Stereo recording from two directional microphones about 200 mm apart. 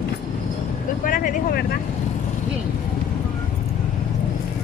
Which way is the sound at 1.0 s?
45° left (ahead or behind).